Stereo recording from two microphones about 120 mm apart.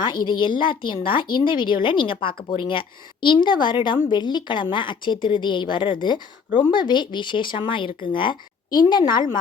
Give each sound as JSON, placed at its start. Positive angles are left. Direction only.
{"t": 0.0, "sound": "a woman's voice", "side_deg": 40}